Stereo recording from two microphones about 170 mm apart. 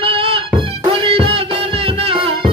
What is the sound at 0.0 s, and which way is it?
Music, 30° right (ahead or behind).